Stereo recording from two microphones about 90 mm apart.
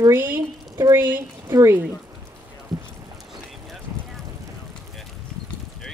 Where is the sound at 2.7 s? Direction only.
5° right (ahead or behind).